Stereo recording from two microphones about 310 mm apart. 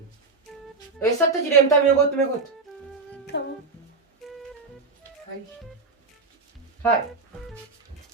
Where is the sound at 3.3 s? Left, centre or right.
Left.